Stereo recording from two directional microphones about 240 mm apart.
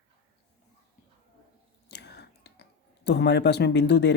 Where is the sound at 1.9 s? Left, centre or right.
Left.